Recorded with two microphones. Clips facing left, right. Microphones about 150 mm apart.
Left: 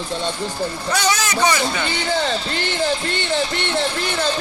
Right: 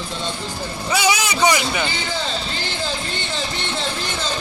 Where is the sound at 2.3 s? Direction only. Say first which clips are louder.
Left 4 dB; 65° left (ahead or behind).